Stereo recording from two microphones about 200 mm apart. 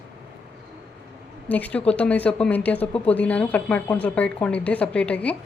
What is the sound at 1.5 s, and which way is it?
A woman's voice, 5° left (ahead or behind).